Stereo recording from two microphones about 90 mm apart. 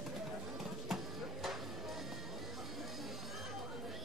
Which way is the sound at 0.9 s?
Centre (ahead or behind).